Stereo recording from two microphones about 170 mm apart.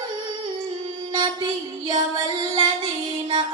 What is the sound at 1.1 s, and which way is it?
Mantra, 25° right (ahead or behind).